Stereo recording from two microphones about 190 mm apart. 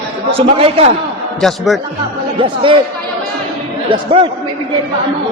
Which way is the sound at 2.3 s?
25° right (ahead or behind).